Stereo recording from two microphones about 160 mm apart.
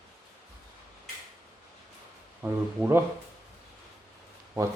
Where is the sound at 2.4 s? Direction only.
15° right (ahead or behind).